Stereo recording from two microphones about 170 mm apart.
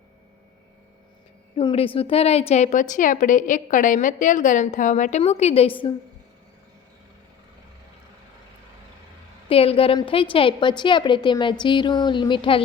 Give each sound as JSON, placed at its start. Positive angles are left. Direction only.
{"t": 1.5, "sound": "a woman's voice", "side_deg": 35}
{"t": 9.5, "sound": "a woman's voice", "side_deg": 35}